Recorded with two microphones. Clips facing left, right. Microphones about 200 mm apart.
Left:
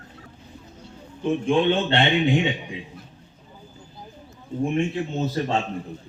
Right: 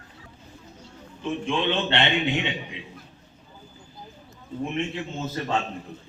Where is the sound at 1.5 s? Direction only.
50° left (ahead or behind).